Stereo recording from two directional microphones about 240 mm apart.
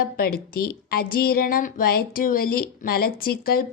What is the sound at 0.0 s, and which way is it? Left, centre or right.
A woman's voice, left.